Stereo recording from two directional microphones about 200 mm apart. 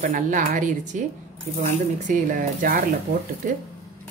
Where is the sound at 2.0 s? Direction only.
40° right (ahead or behind).